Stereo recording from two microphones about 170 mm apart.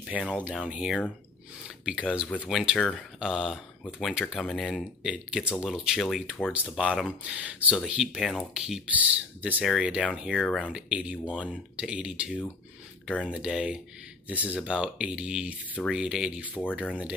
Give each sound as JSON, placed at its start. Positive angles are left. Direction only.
{"t": 0.3, "sound": "speech", "side_deg": -5}
{"t": 10.6, "sound": "speech", "side_deg": -5}